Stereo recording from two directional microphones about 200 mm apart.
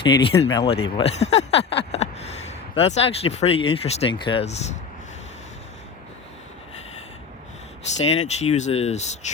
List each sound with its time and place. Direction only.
0.0 s speech: 25° left (ahead or behind)
8.2 s speech: 35° left (ahead or behind)